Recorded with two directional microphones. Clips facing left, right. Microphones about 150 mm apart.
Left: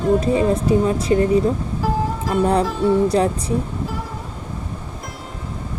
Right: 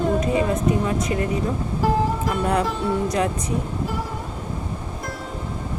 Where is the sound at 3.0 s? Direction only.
30° left (ahead or behind).